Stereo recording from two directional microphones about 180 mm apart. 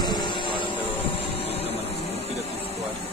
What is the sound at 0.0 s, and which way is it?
Vehicle, 25° left (ahead or behind).